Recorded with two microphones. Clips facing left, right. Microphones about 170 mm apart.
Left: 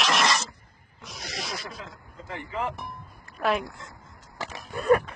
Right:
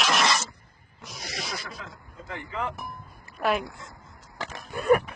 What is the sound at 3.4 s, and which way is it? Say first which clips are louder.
Speech: even; centre (ahead or behind).